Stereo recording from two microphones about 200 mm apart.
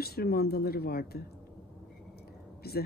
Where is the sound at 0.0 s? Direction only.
50° left (ahead or behind).